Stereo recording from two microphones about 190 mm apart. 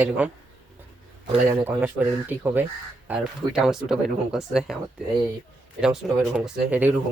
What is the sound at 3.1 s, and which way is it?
Speech, 5° right (ahead or behind).